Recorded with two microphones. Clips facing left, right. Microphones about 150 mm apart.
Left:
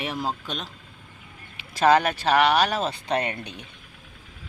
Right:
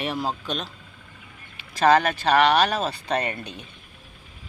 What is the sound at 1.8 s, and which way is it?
Speech, 5° left (ahead or behind).